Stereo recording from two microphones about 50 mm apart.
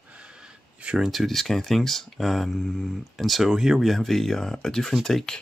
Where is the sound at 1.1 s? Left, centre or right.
Centre.